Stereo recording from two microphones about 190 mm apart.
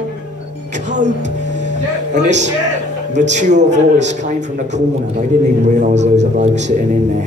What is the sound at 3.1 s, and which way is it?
A man's voice, 40° right (ahead or behind).